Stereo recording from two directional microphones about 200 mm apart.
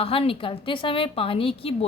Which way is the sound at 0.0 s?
25° left (ahead or behind).